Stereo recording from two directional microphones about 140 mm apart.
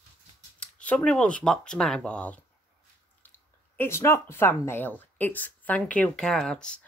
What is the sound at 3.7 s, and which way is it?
A woman's voice, 15° left (ahead or behind).